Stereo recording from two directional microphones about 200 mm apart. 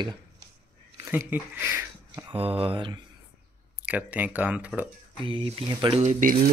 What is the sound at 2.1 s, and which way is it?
Speech, 25° right (ahead or behind).